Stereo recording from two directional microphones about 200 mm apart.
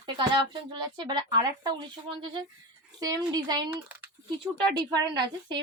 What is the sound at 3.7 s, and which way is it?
Speech, 5° right (ahead or behind).